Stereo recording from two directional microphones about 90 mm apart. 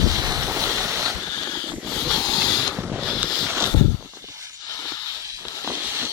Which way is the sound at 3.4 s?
30° right (ahead or behind).